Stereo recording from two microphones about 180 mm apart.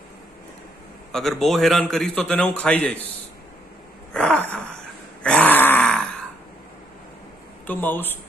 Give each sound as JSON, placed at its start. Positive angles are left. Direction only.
{"t": 1.1, "sound": "a man's voice", "side_deg": 0}
{"t": 4.1, "sound": "a sound", "side_deg": 5}
{"t": 5.2, "sound": "grunt", "side_deg": 5}
{"t": 7.6, "sound": "speech", "side_deg": 10}